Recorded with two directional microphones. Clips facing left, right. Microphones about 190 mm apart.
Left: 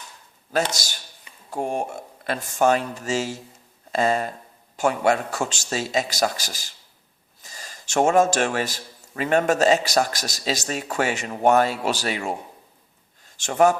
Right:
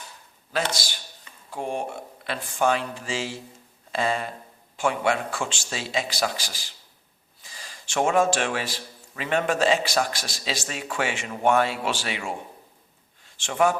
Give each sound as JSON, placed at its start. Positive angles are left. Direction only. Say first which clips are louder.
{"t": 0.5, "sound": "a man's voice", "louder": "left 3 dB", "side_deg": 45}